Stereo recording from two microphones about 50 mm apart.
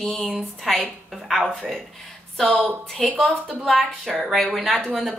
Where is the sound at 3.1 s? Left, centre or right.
Centre.